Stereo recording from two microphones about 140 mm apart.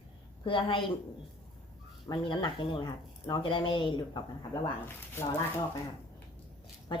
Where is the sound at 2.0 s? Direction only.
35° left (ahead or behind).